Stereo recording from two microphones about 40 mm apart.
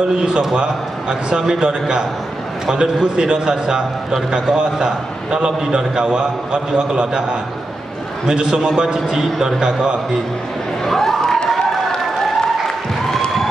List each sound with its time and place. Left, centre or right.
0.2 s a man's voice: centre
8.3 s a man's voice: centre
10.9 s a sound: centre